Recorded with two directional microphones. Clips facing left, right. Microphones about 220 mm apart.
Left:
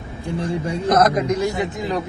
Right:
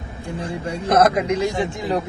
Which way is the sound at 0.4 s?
30° right (ahead or behind).